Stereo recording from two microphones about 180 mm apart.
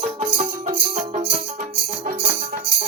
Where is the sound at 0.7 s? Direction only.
45° right (ahead or behind).